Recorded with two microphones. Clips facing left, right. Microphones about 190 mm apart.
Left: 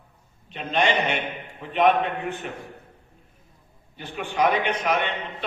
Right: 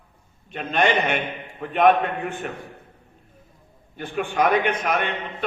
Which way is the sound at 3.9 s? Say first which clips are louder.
Right 4 dB; 50° right (ahead or behind).